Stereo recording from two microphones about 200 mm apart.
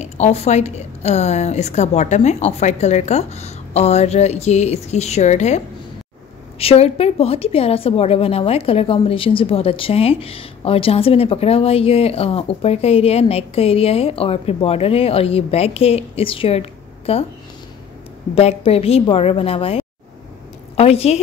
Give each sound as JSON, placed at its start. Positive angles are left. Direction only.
{"t": 0.0, "sound": "a woman's voice", "side_deg": 35}
{"t": 6.6, "sound": "a woman's voice", "side_deg": 30}
{"t": 18.3, "sound": "a woman's voice", "side_deg": 30}